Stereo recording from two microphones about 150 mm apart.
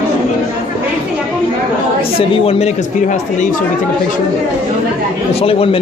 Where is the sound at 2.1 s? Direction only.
40° left (ahead or behind).